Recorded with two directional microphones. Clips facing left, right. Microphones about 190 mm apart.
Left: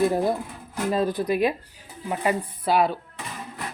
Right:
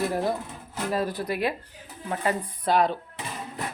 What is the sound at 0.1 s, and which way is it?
Speech, 20° left (ahead or behind).